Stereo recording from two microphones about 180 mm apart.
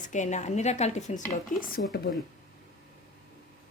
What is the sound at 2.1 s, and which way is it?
Speech, 65° left (ahead or behind).